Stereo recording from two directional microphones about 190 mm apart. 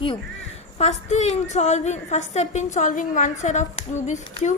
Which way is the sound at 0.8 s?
35° left (ahead or behind).